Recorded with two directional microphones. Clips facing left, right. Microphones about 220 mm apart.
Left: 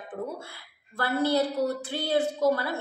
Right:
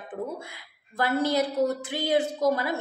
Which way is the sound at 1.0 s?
15° right (ahead or behind).